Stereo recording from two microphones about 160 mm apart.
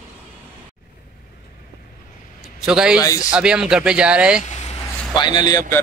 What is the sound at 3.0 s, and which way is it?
Speech, 20° left (ahead or behind).